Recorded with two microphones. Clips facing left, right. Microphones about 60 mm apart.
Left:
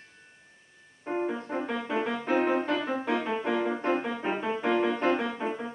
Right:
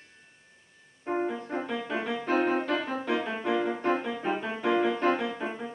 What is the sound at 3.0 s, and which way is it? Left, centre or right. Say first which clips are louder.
Music: left 1 dB; left.